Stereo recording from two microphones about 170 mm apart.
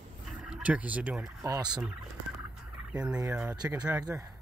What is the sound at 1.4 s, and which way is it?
Speech, 25° right (ahead or behind).